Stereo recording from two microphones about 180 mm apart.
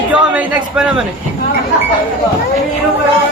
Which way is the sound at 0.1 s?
10° right (ahead or behind).